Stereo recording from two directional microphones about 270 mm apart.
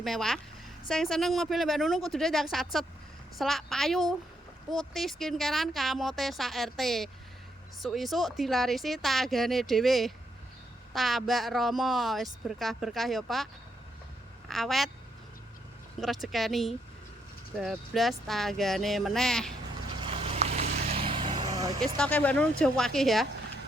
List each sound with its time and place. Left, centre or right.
0.0 s a woman's voice: centre
16.0 s speech: centre
20.0 s vehicle: right
21.9 s speech: centre